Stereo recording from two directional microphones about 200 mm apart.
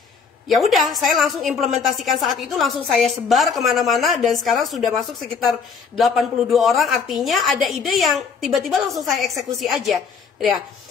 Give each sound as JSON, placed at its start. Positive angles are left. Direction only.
{"t": 0.5, "sound": "a woman's voice", "side_deg": 0}